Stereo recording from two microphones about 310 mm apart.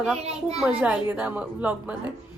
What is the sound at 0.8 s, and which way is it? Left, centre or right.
A woman's voice, centre.